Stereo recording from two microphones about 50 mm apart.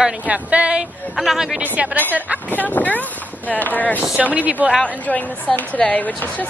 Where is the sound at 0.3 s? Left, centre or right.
Right.